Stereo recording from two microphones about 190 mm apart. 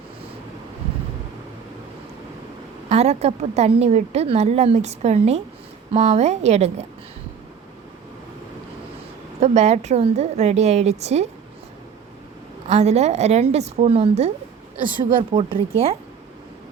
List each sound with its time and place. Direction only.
2.9 s a woman's voice: 35° right (ahead or behind)
9.4 s a woman's voice: 35° right (ahead or behind)
12.6 s a woman's voice: 35° right (ahead or behind)